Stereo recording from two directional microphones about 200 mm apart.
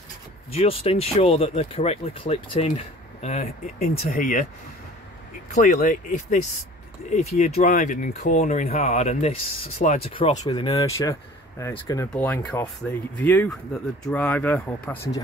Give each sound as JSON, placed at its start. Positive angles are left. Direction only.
{"t": 0.5, "sound": "speech", "side_deg": 30}
{"t": 5.5, "sound": "speech", "side_deg": 40}
{"t": 10.4, "sound": "speech", "side_deg": 20}